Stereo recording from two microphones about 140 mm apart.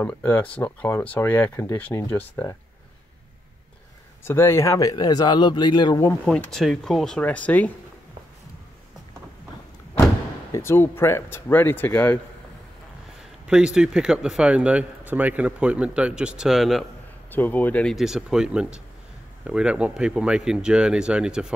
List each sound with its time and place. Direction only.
0.0 s speech: 10° left (ahead or behind)
4.2 s speech: 15° left (ahead or behind)
6.2 s speech: 5° left (ahead or behind)
10.5 s speech: 15° left (ahead or behind)
13.5 s speech: 5° right (ahead or behind)
17.3 s speech: 15° left (ahead or behind)
17.9 s speech: 5° right (ahead or behind)